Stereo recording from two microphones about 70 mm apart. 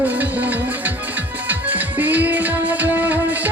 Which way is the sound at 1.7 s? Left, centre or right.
Right.